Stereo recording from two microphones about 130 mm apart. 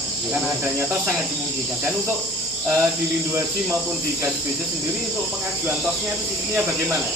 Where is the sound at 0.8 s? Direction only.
20° right (ahead or behind).